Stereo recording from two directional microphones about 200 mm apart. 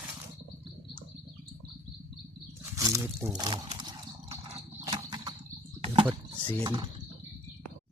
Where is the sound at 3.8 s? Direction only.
20° right (ahead or behind).